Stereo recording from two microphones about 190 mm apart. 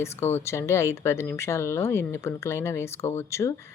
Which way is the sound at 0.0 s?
15° left (ahead or behind).